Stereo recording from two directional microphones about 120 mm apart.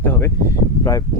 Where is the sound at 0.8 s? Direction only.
30° left (ahead or behind).